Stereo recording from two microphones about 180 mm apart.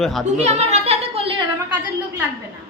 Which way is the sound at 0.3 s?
40° right (ahead or behind).